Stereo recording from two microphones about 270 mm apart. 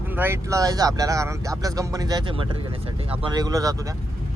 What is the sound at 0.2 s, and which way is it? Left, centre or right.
Speech, centre.